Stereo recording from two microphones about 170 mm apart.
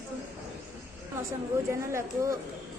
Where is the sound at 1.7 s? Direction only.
15° right (ahead or behind).